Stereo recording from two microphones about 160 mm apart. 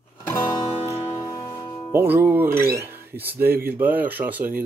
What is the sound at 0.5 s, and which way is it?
Music, 25° left (ahead or behind).